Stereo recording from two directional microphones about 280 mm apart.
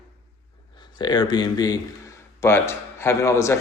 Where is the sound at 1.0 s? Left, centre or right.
Centre.